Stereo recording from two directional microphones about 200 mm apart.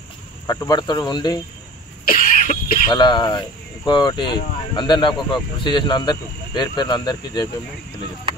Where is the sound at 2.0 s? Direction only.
45° left (ahead or behind).